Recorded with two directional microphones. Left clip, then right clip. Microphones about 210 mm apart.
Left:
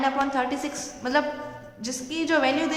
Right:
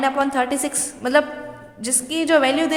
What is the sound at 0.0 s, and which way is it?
A woman's voice, 40° right (ahead or behind).